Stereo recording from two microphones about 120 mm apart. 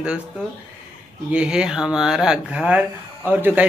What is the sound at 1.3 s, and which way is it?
A man's voice, 10° right (ahead or behind).